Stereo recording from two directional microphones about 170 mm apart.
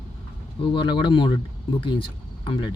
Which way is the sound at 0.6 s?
30° left (ahead or behind).